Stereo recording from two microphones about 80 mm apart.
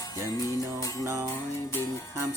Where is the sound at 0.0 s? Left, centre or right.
Left.